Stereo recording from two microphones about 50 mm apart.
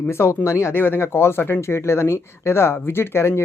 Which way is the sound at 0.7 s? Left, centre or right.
Left.